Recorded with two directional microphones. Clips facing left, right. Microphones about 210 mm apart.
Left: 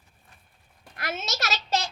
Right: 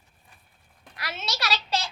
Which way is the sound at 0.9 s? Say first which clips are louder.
Left 2 dB; 50° left (ahead or behind).